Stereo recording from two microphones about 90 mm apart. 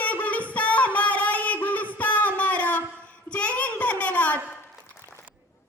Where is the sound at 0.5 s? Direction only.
15° left (ahead or behind).